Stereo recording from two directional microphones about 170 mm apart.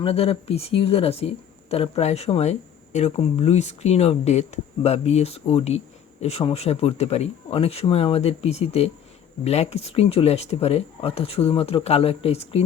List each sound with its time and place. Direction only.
0.0 s speech: 35° left (ahead or behind)